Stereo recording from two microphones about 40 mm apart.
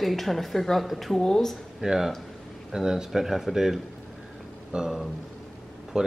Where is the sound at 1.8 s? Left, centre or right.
Centre.